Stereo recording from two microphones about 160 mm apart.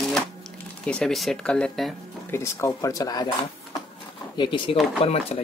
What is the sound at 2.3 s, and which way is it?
Speech, 15° left (ahead or behind).